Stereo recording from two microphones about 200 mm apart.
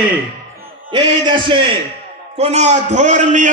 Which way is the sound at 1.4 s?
25° right (ahead or behind).